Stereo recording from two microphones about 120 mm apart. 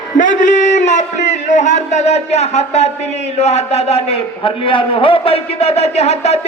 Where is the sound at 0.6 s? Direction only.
80° left.